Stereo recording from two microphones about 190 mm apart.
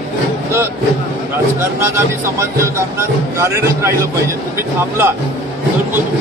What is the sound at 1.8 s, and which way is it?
Speech, 15° right (ahead or behind).